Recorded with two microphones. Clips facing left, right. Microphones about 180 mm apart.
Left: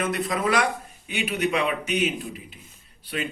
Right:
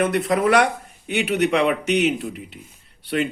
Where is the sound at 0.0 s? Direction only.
65° right (ahead or behind).